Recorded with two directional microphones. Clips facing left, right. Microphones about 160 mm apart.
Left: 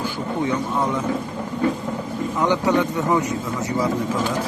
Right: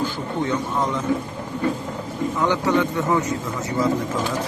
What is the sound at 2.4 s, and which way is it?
Speech, 15° left (ahead or behind).